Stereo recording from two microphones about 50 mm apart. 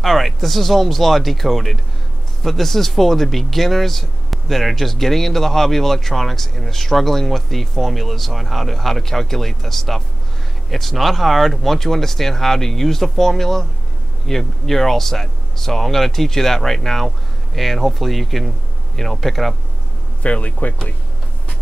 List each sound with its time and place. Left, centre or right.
0.0 s speech: centre
20.2 s speech: left